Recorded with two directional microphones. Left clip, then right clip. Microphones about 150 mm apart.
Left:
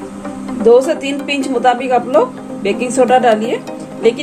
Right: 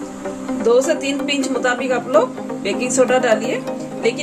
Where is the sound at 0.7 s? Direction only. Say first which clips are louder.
Left 5 dB; 5° left (ahead or behind).